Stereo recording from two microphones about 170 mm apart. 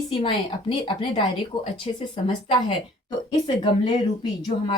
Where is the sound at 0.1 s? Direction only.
30° left (ahead or behind).